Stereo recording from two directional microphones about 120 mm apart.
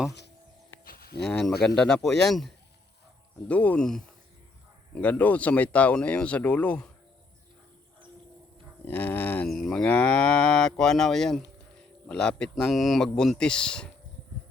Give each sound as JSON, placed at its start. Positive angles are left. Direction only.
{"t": 1.2, "sound": "cattle", "side_deg": 5}
{"t": 3.5, "sound": "speech", "side_deg": 10}
{"t": 8.8, "sound": "speech", "side_deg": 15}
{"t": 9.5, "sound": "cattle", "side_deg": 5}